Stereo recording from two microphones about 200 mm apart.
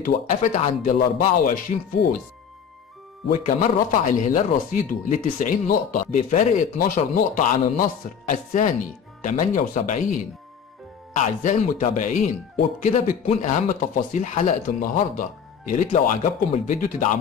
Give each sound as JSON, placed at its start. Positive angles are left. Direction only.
{"t": 0.0, "sound": "speech", "side_deg": 35}
{"t": 3.3, "sound": "speech", "side_deg": 40}